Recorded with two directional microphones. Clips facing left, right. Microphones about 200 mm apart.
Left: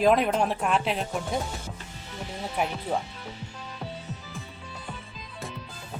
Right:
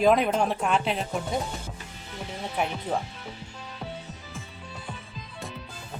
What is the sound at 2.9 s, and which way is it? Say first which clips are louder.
Speech: even; 10° left (ahead or behind).